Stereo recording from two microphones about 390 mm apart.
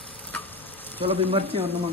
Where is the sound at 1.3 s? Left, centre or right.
Centre.